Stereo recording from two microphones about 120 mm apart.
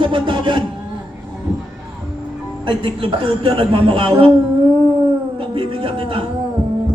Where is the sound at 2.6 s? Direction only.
45° right (ahead or behind).